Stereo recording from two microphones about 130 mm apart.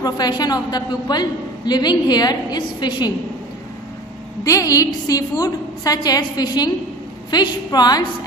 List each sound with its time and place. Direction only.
0.0 s a woman's voice: 30° left (ahead or behind)
4.5 s a woman's voice: 25° left (ahead or behind)